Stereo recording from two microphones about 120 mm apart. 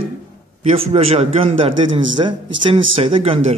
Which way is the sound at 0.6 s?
60° right (ahead or behind).